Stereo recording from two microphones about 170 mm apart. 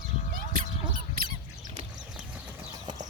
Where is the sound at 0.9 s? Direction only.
55° right (ahead or behind).